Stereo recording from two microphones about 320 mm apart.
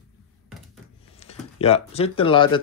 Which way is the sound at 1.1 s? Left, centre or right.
Centre.